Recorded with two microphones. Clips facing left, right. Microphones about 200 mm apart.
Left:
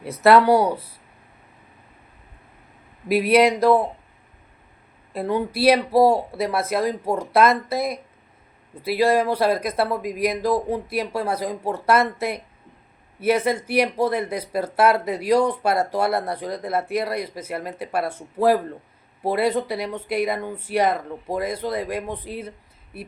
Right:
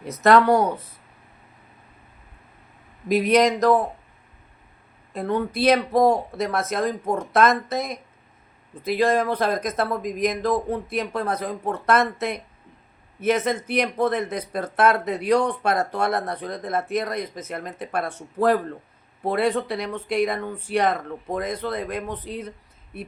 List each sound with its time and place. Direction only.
0.2 s speech: 10° left (ahead or behind)
3.1 s speech: 5° left (ahead or behind)
5.1 s speech: 10° left (ahead or behind)